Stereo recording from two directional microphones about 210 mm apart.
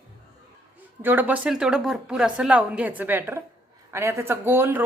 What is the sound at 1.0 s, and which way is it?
Speech, 10° right (ahead or behind).